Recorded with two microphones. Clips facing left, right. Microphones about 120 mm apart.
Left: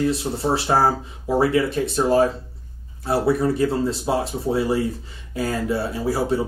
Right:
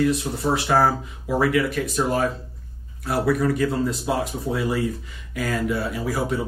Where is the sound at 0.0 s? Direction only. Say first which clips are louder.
Even; 30° left (ahead or behind).